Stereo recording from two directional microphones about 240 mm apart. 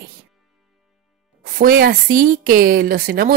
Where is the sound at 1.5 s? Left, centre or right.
Right.